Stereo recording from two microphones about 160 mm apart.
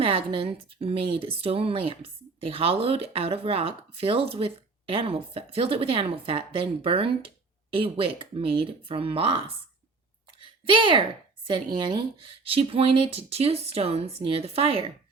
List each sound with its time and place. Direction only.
0.0 s speech: 35° right (ahead or behind)
10.4 s a sound: 30° right (ahead or behind)
11.4 s speech: 30° right (ahead or behind)